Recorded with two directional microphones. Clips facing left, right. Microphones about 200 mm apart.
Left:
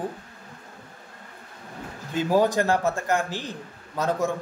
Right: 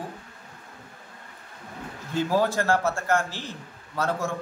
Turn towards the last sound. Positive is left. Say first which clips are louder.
# left 3 dB
turn(degrees=15)  # may be behind; listen again after turning